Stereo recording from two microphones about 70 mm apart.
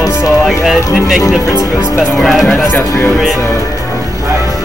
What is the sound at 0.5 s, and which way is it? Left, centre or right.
Speech, centre.